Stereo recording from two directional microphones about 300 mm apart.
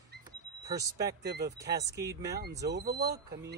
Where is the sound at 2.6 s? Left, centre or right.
Right.